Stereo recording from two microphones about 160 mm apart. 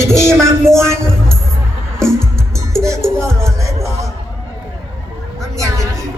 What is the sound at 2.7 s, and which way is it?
Music, 20° right (ahead or behind).